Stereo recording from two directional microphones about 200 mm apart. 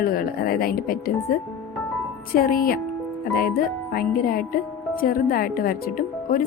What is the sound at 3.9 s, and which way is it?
Speech, 45° left (ahead or behind).